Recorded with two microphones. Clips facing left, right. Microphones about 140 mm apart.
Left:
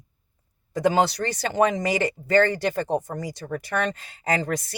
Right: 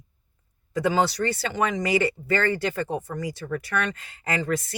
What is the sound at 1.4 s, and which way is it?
Speech, 40° left (ahead or behind).